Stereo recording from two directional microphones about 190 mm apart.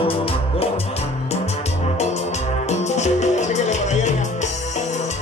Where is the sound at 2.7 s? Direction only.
35° left (ahead or behind).